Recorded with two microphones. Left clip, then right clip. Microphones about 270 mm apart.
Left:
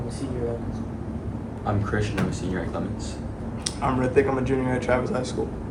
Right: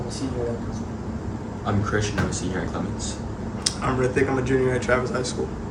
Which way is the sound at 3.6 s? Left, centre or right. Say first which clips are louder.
Right 1 dB; centre.